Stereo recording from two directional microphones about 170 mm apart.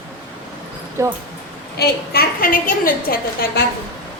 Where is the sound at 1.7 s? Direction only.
65° left (ahead or behind).